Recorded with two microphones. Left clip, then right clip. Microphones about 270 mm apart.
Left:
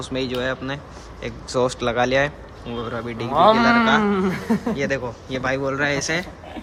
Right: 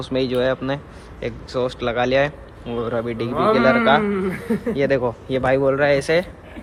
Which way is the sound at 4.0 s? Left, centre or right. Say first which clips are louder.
Left 1 dB; left.